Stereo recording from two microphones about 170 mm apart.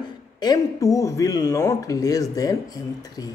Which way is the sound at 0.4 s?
20° left (ahead or behind).